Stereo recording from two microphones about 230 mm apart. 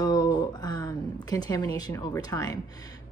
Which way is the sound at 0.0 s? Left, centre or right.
Centre.